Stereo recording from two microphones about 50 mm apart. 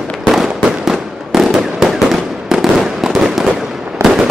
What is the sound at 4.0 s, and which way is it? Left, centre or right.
Fireworks, right.